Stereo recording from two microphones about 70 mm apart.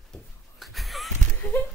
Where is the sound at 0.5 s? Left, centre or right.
Centre.